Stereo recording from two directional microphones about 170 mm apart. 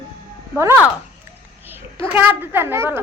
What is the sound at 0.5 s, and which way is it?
Speech, 15° right (ahead or behind).